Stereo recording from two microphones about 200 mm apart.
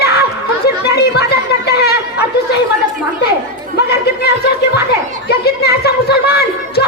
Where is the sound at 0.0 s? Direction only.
55° left (ahead or behind).